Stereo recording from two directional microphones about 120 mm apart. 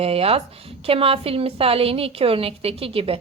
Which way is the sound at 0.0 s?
55° right (ahead or behind).